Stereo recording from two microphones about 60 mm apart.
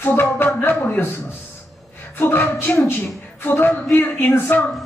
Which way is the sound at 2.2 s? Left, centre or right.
Left.